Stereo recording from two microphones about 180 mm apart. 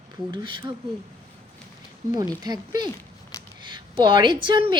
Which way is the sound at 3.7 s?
25° right (ahead or behind).